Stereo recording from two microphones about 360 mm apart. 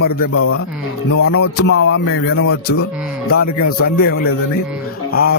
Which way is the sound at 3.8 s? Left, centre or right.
Left.